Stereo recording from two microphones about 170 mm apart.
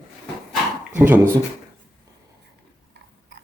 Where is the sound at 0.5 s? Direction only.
10° right (ahead or behind).